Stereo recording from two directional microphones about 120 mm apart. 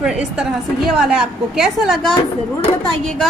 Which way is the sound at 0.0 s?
5° right (ahead or behind).